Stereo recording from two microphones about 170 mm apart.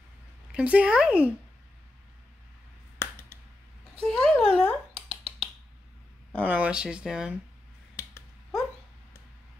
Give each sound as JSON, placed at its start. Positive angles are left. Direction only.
{"t": 0.5, "sound": "speech", "side_deg": -10}
{"t": 3.0, "sound": "finger snapping", "side_deg": 15}
{"t": 4.0, "sound": "a sound", "side_deg": 5}
{"t": 4.9, "sound": "a sound", "side_deg": -35}
{"t": 6.4, "sound": "speech", "side_deg": -10}
{"t": 7.9, "sound": "finger snapping", "side_deg": 15}